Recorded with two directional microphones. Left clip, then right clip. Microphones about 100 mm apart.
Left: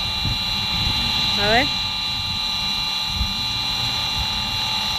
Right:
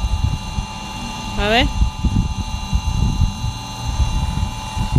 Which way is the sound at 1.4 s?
40° right (ahead or behind).